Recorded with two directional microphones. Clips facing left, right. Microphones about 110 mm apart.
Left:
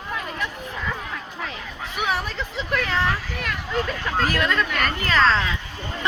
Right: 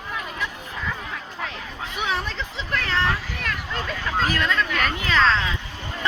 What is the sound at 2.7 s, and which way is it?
Speech, 5° left (ahead or behind).